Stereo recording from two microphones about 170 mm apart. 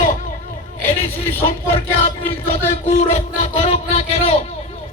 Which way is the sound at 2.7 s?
40° left (ahead or behind).